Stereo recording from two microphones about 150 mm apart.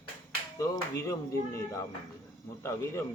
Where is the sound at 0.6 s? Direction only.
20° left (ahead or behind).